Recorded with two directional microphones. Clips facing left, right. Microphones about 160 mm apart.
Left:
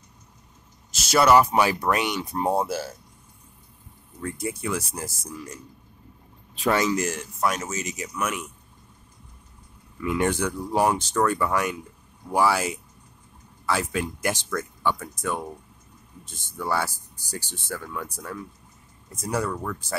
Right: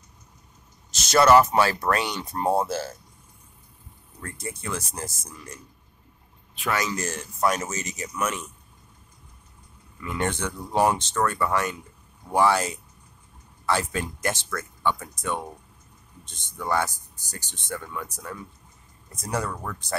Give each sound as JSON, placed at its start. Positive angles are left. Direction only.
{"t": 1.0, "sound": "speech", "side_deg": 10}
{"t": 4.2, "sound": "speech", "side_deg": 10}
{"t": 6.6, "sound": "speech", "side_deg": 30}
{"t": 7.3, "sound": "speech", "side_deg": 0}
{"t": 10.0, "sound": "speech", "side_deg": 10}
{"t": 16.3, "sound": "speech", "side_deg": 5}